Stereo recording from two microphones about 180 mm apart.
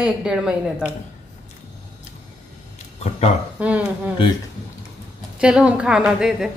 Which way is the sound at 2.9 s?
40° left (ahead or behind).